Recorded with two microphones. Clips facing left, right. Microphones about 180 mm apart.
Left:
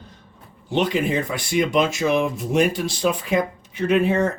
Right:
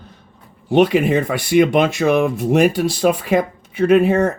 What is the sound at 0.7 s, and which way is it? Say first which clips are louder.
Speech: right 7 dB; 60° right (ahead or behind).